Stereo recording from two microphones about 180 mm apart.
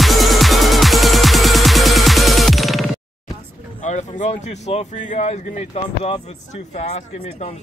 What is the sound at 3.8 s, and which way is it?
Speech, 40° left (ahead or behind).